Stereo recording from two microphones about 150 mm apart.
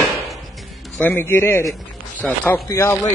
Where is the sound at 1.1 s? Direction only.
15° left (ahead or behind).